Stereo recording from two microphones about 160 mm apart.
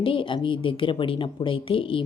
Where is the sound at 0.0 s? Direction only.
35° left (ahead or behind).